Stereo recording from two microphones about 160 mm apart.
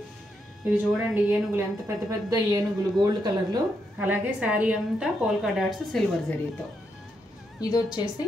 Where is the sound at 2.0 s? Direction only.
20° right (ahead or behind).